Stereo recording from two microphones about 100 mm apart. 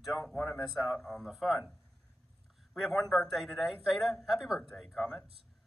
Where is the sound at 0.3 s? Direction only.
5° left (ahead or behind).